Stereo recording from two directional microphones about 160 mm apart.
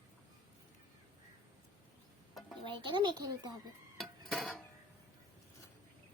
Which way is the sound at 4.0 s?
Centre (ahead or behind).